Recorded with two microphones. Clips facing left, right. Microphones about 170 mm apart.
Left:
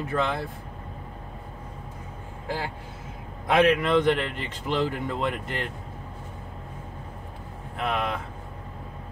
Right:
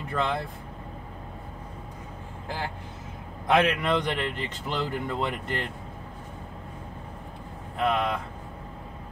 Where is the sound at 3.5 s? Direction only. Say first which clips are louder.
Left 3 dB; 5° left (ahead or behind).